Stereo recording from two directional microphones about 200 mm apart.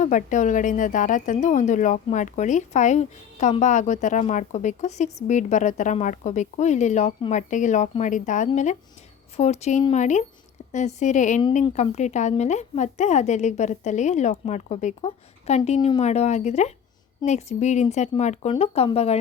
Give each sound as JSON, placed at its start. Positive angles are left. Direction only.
{"t": 0.0, "sound": "a woman's voice", "side_deg": 40}